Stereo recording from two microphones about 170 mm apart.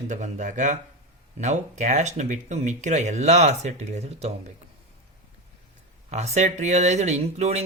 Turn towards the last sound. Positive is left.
turn(degrees=-40)  # may be behind; listen again after turning